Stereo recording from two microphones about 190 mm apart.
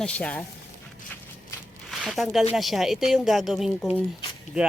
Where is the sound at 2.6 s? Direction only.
Centre (ahead or behind).